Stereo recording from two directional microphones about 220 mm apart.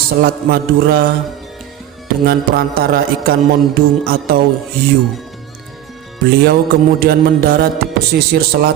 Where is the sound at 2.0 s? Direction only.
40° right (ahead or behind).